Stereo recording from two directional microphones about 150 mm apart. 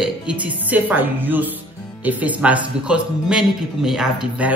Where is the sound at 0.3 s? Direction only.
5° right (ahead or behind).